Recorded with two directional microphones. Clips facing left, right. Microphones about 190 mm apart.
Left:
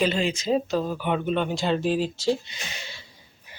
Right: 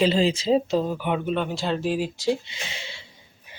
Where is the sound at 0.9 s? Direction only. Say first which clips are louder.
Even; 10° right (ahead or behind).